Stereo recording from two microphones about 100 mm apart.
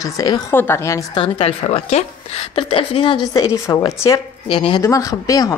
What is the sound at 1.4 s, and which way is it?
A woman's voice, 75° left (ahead or behind).